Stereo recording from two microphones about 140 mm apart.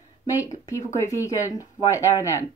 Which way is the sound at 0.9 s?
20° left (ahead or behind).